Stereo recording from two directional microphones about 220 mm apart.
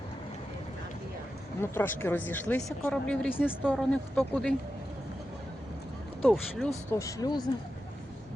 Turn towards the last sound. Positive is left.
turn(degrees=20)  # may be behind; listen again after turning